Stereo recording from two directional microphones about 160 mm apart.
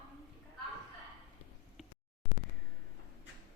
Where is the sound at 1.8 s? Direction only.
Centre (ahead or behind).